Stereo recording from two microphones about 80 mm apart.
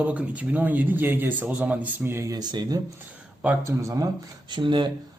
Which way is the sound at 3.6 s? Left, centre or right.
Right.